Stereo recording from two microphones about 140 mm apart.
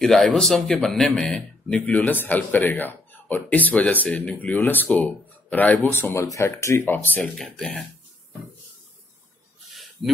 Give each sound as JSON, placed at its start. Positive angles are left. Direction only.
{"t": 0.0, "sound": "speech", "side_deg": 5}
{"t": 7.3, "sound": "speech", "side_deg": 0}